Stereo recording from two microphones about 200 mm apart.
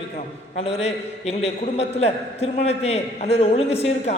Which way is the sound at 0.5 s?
30° left (ahead or behind).